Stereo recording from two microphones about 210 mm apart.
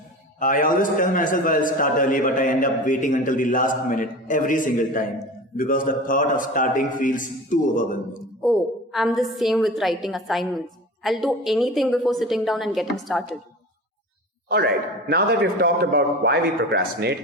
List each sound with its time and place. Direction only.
0.3 s a man's voice: 40° left (ahead or behind)
8.4 s a woman's voice: centre (ahead or behind)
15.1 s a man's voice: 55° right (ahead or behind)